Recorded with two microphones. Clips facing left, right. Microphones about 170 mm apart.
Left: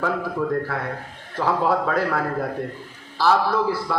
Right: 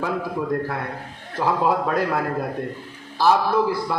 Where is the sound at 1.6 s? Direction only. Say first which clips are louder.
Even; 15° right (ahead or behind).